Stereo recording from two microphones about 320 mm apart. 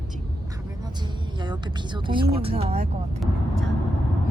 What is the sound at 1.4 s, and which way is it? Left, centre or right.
Speech, centre.